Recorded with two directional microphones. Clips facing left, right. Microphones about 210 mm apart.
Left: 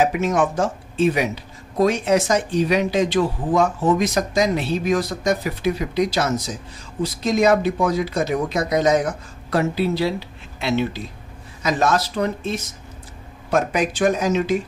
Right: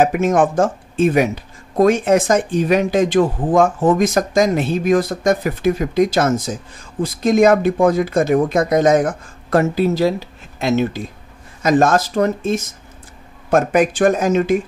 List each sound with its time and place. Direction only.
0.0 s speech: 50° right (ahead or behind)